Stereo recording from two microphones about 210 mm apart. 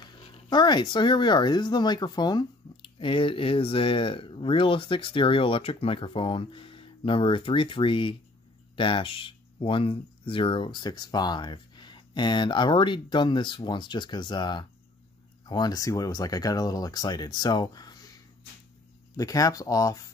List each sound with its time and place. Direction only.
0.0 s speech: 20° left (ahead or behind)
19.1 s speech: 15° left (ahead or behind)